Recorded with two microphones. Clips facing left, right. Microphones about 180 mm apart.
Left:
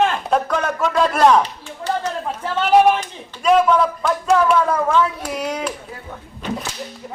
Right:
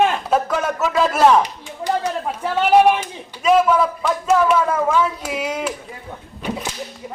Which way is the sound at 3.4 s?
Centre (ahead or behind).